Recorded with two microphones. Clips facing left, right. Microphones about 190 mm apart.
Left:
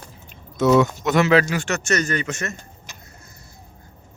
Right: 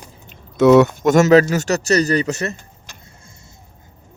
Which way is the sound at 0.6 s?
65° right (ahead or behind).